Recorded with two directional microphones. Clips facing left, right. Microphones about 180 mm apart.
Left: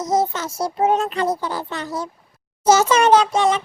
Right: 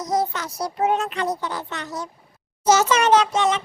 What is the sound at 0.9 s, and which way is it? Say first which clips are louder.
Speech: left 3 dB; 35° left (ahead or behind).